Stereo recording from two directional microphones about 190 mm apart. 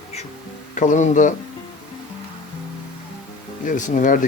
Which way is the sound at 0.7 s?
40° left (ahead or behind).